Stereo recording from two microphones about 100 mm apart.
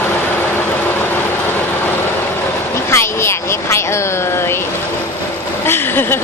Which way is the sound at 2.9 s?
25° left (ahead or behind).